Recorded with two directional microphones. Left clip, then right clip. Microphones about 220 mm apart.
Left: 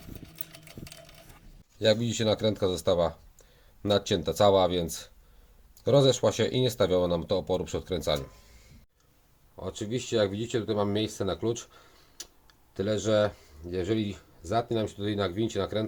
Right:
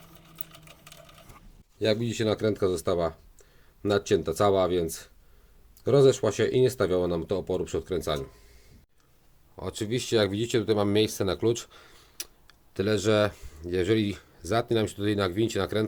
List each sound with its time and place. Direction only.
1.8 s speech: centre (ahead or behind)
9.6 s speech: 35° right (ahead or behind)